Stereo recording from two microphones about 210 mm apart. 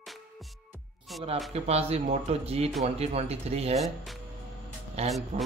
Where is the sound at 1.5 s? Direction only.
30° right (ahead or behind).